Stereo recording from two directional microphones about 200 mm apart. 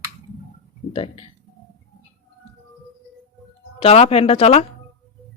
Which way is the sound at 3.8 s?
30° left (ahead or behind).